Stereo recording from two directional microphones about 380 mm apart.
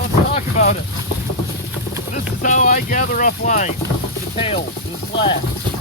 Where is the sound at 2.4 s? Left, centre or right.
Centre.